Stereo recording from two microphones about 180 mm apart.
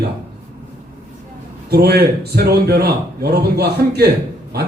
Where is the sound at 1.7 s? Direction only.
60° right (ahead or behind).